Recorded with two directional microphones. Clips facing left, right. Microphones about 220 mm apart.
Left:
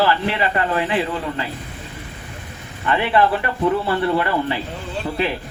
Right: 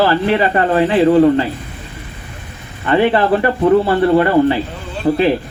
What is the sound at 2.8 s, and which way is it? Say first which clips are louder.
Speech: right 5 dB; 35° right (ahead or behind).